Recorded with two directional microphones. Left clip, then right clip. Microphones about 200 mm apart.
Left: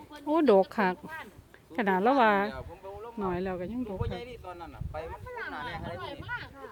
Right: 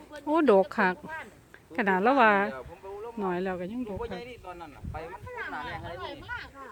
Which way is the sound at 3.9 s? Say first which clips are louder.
Right 1 dB; 40° left (ahead or behind).